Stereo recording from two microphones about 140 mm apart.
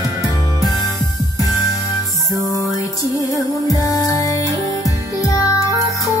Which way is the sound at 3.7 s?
25° left (ahead or behind).